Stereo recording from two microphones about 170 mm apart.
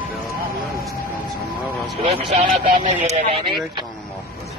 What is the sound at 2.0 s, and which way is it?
Speech, 40° right (ahead or behind).